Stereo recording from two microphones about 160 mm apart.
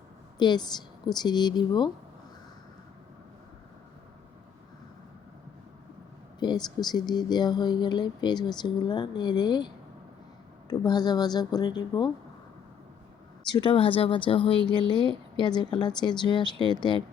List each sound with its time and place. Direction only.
0.3 s speech: 25° left (ahead or behind)
6.4 s speech: 25° left (ahead or behind)
13.5 s speech: 30° left (ahead or behind)